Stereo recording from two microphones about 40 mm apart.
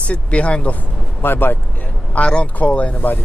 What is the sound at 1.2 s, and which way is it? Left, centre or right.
Speech, left.